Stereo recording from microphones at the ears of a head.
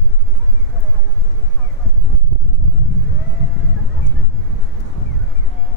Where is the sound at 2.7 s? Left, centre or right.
Left.